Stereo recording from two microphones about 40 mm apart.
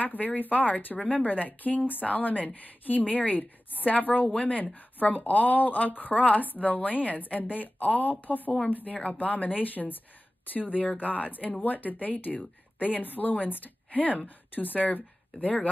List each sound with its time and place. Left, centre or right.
0.0 s a woman's voice: left